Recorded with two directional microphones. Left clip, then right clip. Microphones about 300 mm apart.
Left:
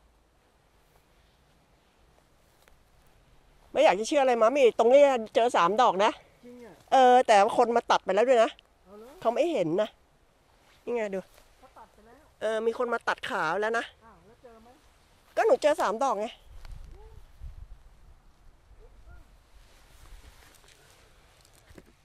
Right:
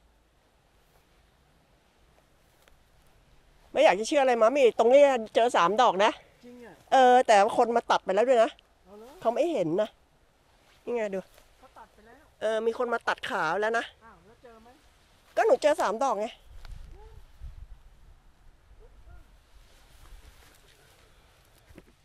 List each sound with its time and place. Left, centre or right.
3.7 s speech: centre
10.7 s a sound: centre
12.4 s speech: centre
15.2 s speech: centre